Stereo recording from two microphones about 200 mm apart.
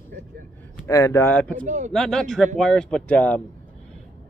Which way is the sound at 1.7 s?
35° right (ahead or behind).